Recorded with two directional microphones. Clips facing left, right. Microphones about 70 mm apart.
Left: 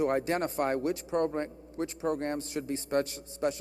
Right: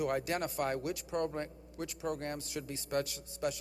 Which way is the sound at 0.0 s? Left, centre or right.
Left.